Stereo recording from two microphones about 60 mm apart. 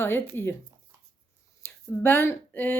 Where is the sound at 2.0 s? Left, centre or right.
Left.